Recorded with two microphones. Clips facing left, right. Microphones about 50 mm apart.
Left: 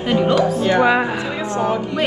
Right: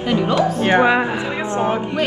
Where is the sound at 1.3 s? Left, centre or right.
Right.